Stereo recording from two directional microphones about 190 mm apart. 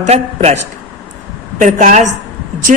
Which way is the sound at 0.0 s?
35° right (ahead or behind).